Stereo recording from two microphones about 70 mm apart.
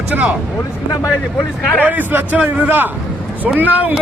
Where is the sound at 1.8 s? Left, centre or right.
Right.